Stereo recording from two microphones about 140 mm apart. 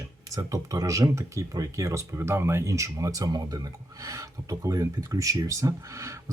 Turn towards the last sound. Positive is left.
turn(degrees=-20)  # may be behind; listen again after turning